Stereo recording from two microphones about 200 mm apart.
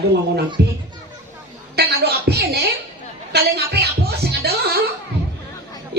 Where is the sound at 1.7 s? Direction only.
55° right (ahead or behind).